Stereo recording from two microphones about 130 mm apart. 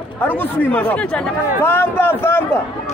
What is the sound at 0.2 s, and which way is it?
Speech, 15° left (ahead or behind).